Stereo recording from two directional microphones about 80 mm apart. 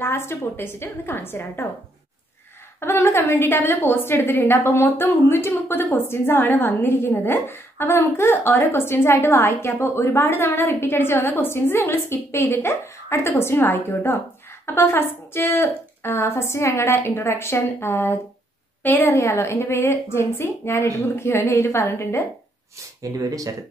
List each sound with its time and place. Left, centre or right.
0.0 s a woman's voice: left
2.8 s a woman's voice: left
19.0 s a woman's voice: left
23.0 s speech: right